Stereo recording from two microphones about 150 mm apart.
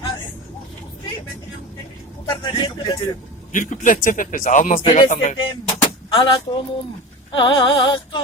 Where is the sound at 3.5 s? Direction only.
60° left (ahead or behind).